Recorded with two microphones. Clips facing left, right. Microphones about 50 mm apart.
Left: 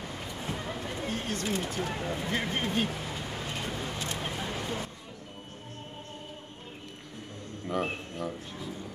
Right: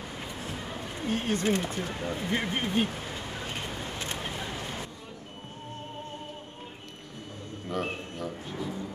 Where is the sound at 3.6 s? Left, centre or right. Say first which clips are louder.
Left 1 dB; right.